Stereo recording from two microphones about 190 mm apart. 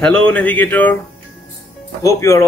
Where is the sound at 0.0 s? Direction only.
5° left (ahead or behind).